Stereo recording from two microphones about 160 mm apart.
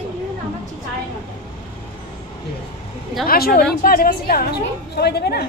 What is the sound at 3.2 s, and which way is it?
A woman's voice, 65° left (ahead or behind).